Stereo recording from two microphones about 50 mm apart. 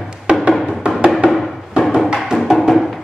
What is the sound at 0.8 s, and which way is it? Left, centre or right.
Music, right.